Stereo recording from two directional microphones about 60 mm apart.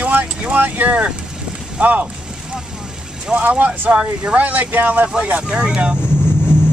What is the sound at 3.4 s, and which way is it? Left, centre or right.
Speech, right.